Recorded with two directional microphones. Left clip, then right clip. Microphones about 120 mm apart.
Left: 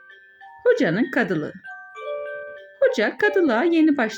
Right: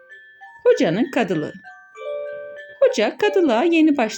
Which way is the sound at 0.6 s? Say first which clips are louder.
Right 2 dB; 15° right (ahead or behind).